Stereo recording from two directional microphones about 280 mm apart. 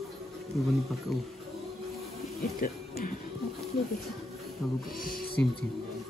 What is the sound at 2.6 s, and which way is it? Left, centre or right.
Speech, left.